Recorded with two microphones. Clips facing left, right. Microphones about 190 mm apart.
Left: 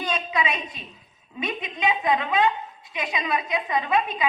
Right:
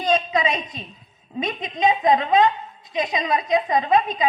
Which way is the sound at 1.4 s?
40° right (ahead or behind).